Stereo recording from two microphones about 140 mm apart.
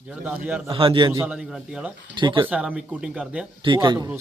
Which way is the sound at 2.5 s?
5° right (ahead or behind).